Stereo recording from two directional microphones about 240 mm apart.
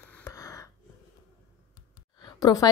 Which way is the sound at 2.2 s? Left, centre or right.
Centre.